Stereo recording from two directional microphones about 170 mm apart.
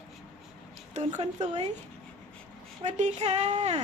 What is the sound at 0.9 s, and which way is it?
Speech, 40° right (ahead or behind).